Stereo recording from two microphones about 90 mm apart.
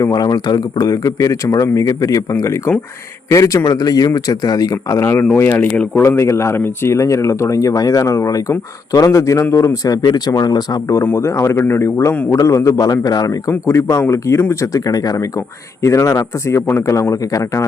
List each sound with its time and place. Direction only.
0.0 s speech: 45° left (ahead or behind); by 6.0 s 15° left (ahead or behind)
6.0 s speech: 30° left (ahead or behind); by 10.9 s 50° left (ahead or behind)
11.0 s a man's voice: 30° left (ahead or behind)
13.5 s speech: 30° left (ahead or behind)